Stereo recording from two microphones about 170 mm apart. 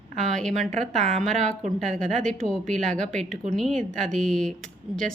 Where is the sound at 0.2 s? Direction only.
5° left (ahead or behind).